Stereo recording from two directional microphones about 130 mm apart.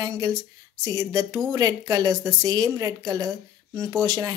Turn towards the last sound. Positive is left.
turn(degrees=-30)  # may be behind; listen again after turning